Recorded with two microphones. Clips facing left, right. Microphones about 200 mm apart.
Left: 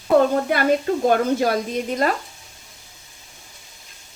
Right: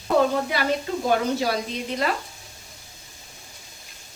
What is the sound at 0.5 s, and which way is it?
A woman's voice, 55° left (ahead or behind).